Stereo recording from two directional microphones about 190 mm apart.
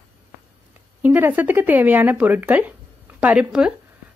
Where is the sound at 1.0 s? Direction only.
10° right (ahead or behind).